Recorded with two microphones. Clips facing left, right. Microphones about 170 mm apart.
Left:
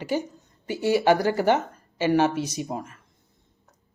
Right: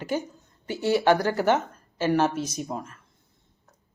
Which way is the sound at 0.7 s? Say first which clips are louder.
Left 1 dB; 10° left (ahead or behind).